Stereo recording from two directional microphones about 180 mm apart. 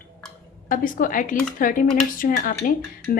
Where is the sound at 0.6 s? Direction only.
50° left (ahead or behind).